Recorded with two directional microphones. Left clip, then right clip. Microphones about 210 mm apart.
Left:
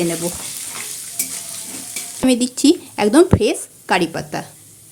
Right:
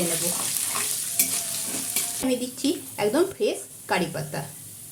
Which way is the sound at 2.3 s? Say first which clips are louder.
Left 12 dB; 45° left (ahead or behind).